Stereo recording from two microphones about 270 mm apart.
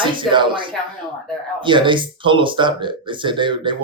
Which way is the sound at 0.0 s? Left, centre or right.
Centre.